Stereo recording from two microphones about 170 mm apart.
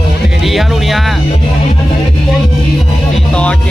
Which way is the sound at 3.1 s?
5° left (ahead or behind).